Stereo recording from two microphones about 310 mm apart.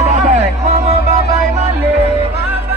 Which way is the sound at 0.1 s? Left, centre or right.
Right.